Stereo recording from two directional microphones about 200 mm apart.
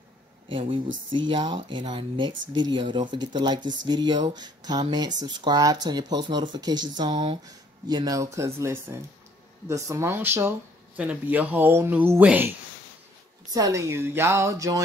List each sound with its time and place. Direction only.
0.5 s speech: 25° right (ahead or behind)